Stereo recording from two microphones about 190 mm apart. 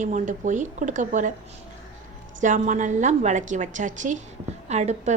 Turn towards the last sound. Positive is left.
turn(degrees=-35)  # may be behind; listen again after turning